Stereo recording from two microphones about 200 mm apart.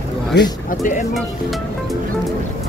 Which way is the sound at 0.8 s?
40° left (ahead or behind).